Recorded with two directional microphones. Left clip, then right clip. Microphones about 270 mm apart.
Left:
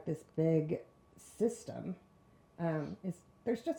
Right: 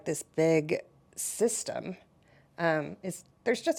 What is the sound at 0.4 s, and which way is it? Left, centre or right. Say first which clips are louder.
Speech: right 7 dB; centre.